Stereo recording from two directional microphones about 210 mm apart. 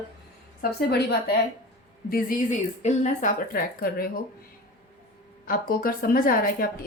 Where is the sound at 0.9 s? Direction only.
50° left (ahead or behind).